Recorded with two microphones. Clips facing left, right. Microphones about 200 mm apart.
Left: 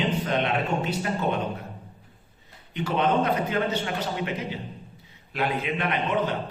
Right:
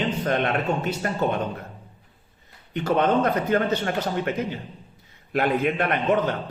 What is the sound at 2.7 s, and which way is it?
A man's voice, 45° right (ahead or behind).